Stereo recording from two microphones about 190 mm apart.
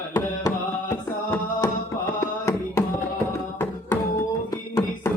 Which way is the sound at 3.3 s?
10° left (ahead or behind).